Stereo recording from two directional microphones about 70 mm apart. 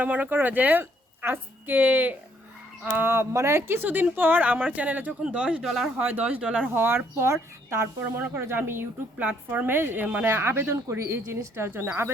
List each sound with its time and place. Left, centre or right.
0.0 s a woman's voice: right
5.6 s speech: centre
6.0 s speech: right
6.7 s speech: right
9.1 s speech: right